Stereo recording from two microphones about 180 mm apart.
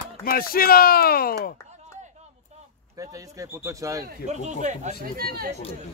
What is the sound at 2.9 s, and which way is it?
Speech, 20° right (ahead or behind).